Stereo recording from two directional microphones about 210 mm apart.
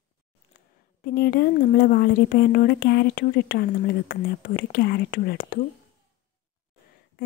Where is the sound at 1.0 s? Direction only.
45° left (ahead or behind).